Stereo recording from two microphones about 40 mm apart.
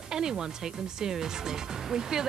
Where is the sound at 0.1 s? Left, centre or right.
Centre.